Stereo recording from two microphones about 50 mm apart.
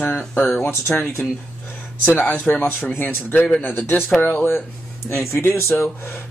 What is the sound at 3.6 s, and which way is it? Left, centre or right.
Speech, left.